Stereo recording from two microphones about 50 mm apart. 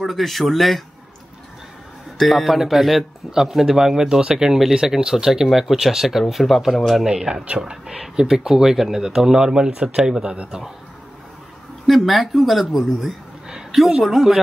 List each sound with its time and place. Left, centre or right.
0.0 s speech: centre
2.1 s a man's voice: centre; by 10.6 s right
11.8 s speech: centre
13.5 s a sound: centre
13.7 s speech: centre